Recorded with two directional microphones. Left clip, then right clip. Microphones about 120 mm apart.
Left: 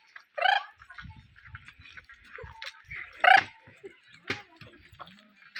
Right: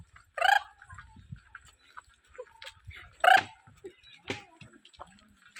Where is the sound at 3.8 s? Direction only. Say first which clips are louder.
Even; 5° left (ahead or behind).